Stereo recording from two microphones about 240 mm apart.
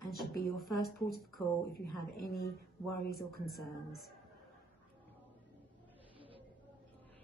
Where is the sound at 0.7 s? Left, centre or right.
Left.